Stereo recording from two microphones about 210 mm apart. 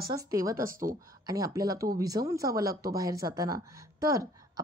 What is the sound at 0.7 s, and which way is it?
Speech, 40° right (ahead or behind).